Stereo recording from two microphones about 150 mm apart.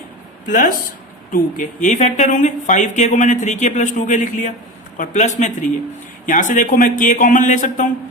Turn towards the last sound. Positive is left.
turn(degrees=60)  # may be behind; listen again after turning